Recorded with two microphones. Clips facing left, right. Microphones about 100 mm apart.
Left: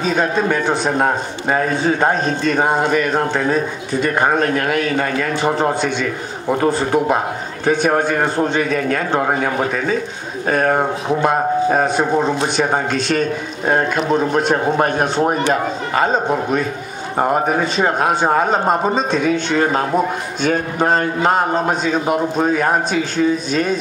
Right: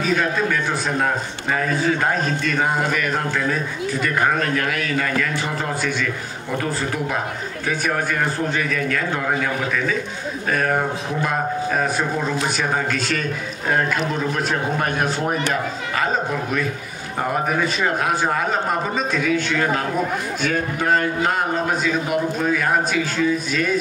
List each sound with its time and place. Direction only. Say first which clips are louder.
0.0 s a man's voice: left 3 dB; 30° left (ahead or behind)
7.9 s a man's voice: left 5 dB; 35° left (ahead or behind)
12.0 s a man's voice: left 6 dB; 25° left (ahead or behind)